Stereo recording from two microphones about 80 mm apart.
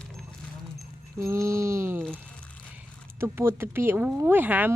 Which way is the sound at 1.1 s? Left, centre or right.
Right.